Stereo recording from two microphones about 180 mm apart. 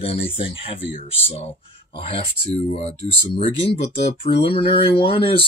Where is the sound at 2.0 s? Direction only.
30° left (ahead or behind).